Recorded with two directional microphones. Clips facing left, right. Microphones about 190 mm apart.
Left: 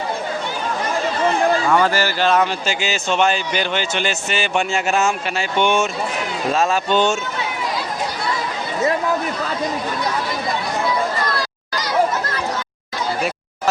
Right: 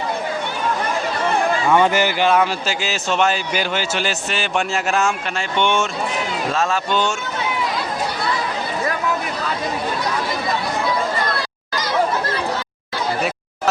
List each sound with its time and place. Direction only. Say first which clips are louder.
1.7 s a man's voice: right 1 dB; 20° right (ahead or behind); by 7.2 s 20° left (ahead or behind)